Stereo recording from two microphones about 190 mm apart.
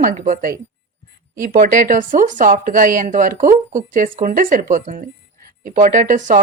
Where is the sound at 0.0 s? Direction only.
45° right (ahead or behind).